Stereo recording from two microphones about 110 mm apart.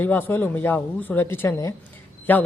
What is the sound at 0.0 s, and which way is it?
Speech, 20° left (ahead or behind).